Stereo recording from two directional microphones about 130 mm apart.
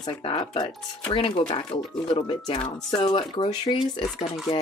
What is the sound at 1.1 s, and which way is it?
Speech, 40° left (ahead or behind).